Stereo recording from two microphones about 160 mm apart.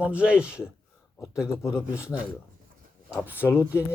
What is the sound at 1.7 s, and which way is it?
Speech, 5° right (ahead or behind).